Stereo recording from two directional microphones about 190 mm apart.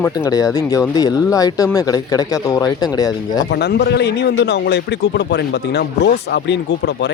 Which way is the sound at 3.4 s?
60° left (ahead or behind).